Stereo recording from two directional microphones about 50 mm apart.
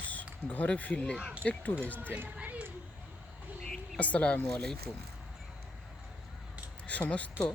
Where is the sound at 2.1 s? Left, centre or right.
Right.